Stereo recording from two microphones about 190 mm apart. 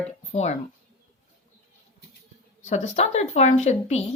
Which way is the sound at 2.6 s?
35° left (ahead or behind).